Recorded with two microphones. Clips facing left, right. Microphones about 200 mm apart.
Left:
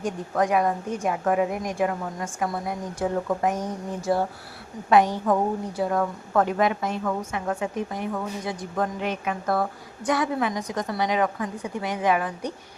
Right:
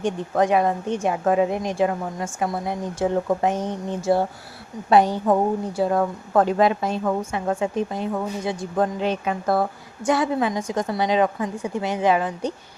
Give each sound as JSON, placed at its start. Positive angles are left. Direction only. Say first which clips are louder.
{"t": 0.0, "sound": "a woman's voice", "louder": "right 4 dB", "side_deg": -25}